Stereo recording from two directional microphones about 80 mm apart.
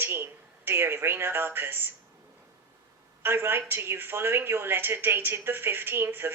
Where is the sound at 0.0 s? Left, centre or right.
Right.